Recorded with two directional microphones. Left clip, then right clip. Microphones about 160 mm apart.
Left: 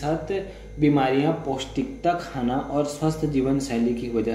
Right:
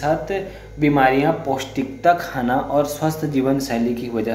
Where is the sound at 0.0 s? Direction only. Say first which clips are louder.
Right 6 dB; 10° left (ahead or behind).